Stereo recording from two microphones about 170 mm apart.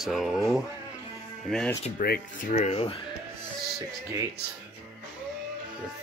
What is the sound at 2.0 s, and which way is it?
Speech, 55° left (ahead or behind).